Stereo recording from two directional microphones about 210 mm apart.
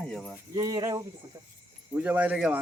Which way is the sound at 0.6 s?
20° right (ahead or behind).